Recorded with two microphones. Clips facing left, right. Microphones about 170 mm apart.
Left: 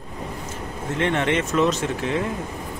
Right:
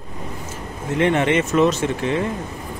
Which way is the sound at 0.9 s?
5° right (ahead or behind).